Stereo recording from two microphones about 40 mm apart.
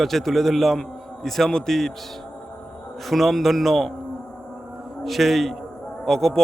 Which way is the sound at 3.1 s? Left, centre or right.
Centre.